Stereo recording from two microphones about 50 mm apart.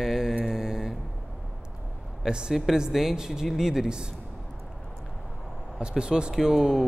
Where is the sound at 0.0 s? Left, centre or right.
Centre.